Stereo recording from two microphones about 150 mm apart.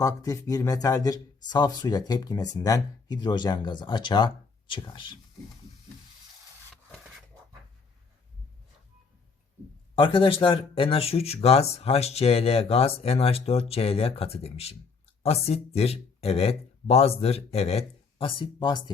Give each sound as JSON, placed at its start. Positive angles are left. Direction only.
{"t": 0.0, "sound": "speech", "side_deg": 25}
{"t": 9.9, "sound": "speech", "side_deg": 35}